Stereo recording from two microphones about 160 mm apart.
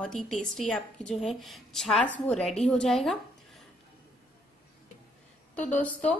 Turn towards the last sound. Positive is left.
turn(degrees=10)  # may be behind; listen again after turning